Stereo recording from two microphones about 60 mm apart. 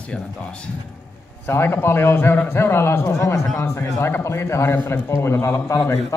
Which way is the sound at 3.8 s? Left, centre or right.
Left.